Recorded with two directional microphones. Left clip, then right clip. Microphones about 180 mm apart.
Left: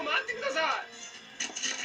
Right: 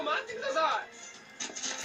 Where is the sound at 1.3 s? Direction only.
Centre (ahead or behind).